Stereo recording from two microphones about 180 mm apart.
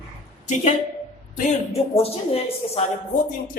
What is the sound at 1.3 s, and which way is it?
A woman's voice, 35° left (ahead or behind).